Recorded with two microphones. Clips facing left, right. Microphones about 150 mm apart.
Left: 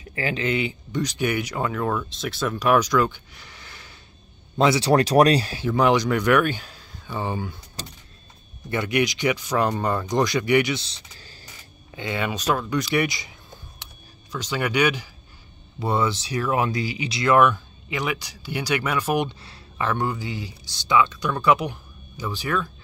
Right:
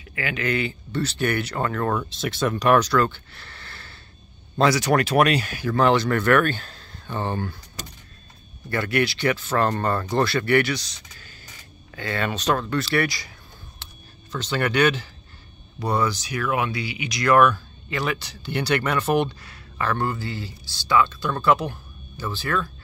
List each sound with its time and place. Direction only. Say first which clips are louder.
0.0 s speech: left 2 dB; 35° left (ahead or behind); by 4.0 s 15° left (ahead or behind)
4.6 s speech: left 1 dB; 25° left (ahead or behind)
5.7 s speech: even; 15° left (ahead or behind)
7.8 s speech: left 1 dB; 30° left (ahead or behind)
8.6 s speech: even; 20° left (ahead or behind)
11.9 s speech: even; 15° left (ahead or behind)
13.8 s a sound: even; 15° left (ahead or behind)
14.3 s speech: right 1 dB; 10° left (ahead or behind)
15.8 s speech: even; 25° left (ahead or behind)
19.4 s speech: even; 25° left (ahead or behind)